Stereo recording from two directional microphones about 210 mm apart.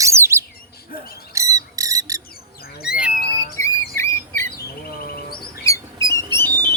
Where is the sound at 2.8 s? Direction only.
5° right (ahead or behind).